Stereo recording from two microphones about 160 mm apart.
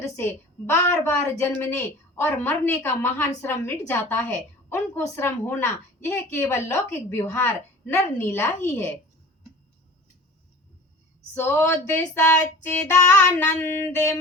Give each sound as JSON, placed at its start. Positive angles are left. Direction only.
{"t": 0.0, "sound": "a woman's voice", "side_deg": 15}
{"t": 11.3, "sound": "a woman's voice", "side_deg": 15}